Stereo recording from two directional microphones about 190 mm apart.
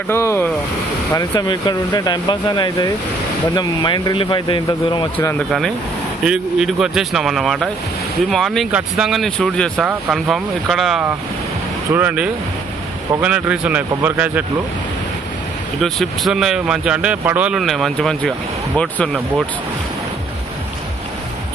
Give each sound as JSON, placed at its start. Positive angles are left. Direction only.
{"t": 0.1, "sound": "speech", "side_deg": 15}
{"t": 5.1, "sound": "speech", "side_deg": 10}
{"t": 6.2, "sound": "speech", "side_deg": -5}
{"t": 15.8, "sound": "speech", "side_deg": 0}